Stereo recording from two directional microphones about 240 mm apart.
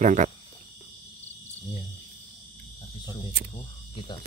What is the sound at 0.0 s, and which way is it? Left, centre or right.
Speech, right.